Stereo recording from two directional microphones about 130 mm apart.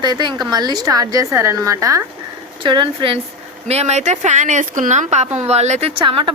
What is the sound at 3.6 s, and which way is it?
A woman's voice, 55° right (ahead or behind).